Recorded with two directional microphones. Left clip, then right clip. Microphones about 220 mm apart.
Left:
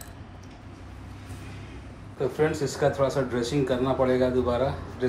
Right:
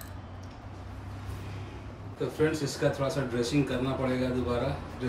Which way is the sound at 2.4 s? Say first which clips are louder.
Left 3 dB; centre (ahead or behind).